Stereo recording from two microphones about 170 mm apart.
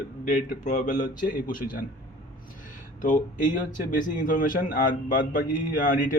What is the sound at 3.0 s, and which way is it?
Speech, 50° left (ahead or behind).